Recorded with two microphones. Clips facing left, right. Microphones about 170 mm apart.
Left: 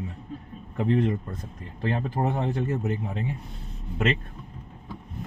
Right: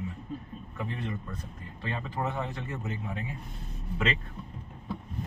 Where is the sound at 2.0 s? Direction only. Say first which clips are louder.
Left 4 dB; 50° left (ahead or behind).